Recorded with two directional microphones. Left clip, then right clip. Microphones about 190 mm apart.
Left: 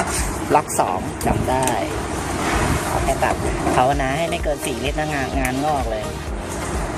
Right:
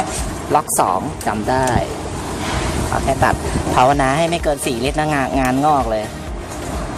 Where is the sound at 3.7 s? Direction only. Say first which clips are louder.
Right 6 dB; 30° right (ahead or behind).